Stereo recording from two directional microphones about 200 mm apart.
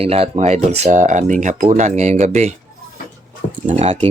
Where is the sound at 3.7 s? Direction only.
35° right (ahead or behind).